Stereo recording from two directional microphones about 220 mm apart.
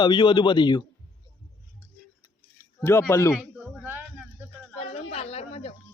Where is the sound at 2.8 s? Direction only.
10° left (ahead or behind).